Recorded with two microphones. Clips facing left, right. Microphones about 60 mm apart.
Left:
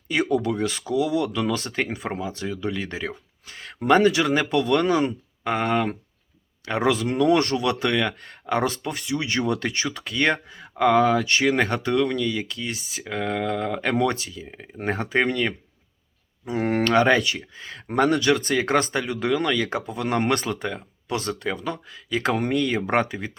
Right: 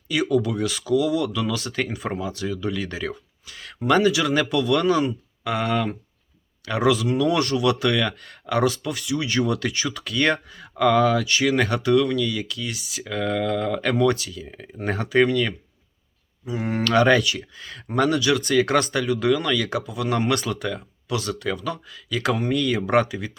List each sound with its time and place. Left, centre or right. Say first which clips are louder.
0.1 s speech: right 1 dB; left; by 14.7 s centre
14.8 s speech: right 3 dB; left
16.5 s speech: left 3 dB; left
16.8 s speech: right 2 dB; left